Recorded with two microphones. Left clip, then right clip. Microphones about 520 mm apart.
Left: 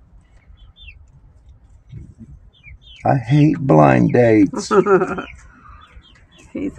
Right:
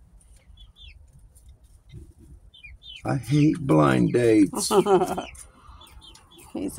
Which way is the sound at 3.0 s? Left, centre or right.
Right.